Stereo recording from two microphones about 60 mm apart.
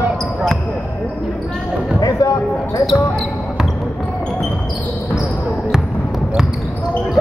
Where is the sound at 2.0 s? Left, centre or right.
Left.